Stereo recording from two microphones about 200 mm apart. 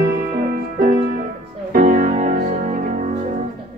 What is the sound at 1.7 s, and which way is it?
Music, 45° right (ahead or behind).